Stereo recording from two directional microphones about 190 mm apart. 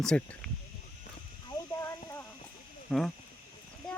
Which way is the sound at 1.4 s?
15° left (ahead or behind).